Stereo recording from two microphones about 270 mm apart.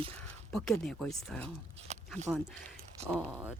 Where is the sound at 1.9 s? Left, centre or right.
Right.